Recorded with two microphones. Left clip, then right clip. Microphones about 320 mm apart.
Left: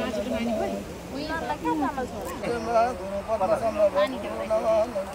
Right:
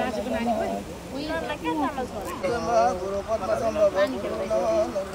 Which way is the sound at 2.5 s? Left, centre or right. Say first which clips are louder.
Right 1 dB; left.